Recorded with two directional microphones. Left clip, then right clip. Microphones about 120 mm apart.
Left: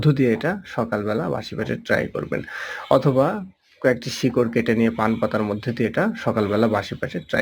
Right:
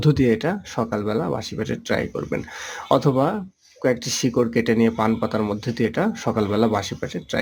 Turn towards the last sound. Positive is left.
turn(degrees=-25)  # may be behind; listen again after turning